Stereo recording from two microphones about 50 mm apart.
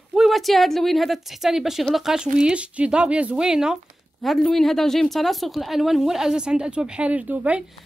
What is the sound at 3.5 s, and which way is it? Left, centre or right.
Speech, centre.